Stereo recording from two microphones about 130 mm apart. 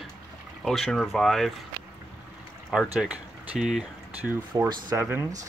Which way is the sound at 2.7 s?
5° right (ahead or behind).